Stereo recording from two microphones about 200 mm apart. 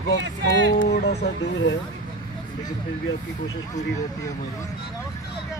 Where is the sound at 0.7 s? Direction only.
55° left (ahead or behind).